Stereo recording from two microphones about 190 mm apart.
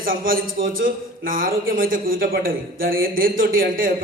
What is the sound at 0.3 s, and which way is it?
A man's voice, 50° right (ahead or behind).